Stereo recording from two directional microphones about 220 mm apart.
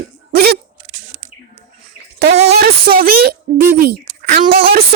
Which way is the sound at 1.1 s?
35° right (ahead or behind).